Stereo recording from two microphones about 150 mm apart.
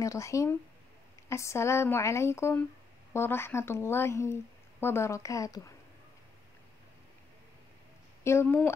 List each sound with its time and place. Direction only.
0.0 s a woman's voice: 20° left (ahead or behind)
8.2 s a woman's voice: 15° left (ahead or behind)